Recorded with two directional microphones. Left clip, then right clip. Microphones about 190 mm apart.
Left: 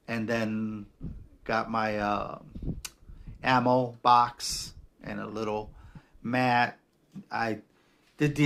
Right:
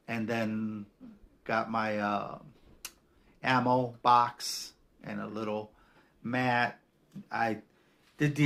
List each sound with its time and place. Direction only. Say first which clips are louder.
0.0 s speech: left 3 dB; 25° left (ahead or behind)
2.8 s a sound: left 3 dB; 25° left (ahead or behind)
3.4 s a man's voice: left 3 dB; 25° left (ahead or behind)